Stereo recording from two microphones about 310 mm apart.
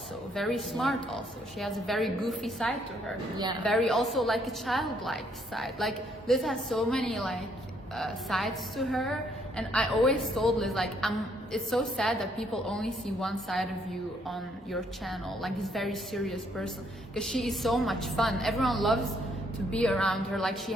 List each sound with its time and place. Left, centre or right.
0.3 s a woman's voice: centre